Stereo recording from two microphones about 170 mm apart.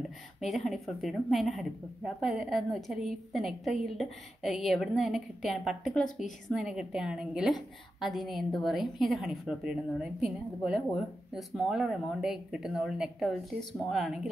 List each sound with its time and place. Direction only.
0.4 s a woman's voice: centre (ahead or behind)